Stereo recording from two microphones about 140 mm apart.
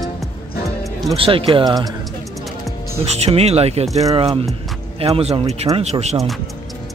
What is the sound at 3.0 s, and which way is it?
Speech, 45° right (ahead or behind).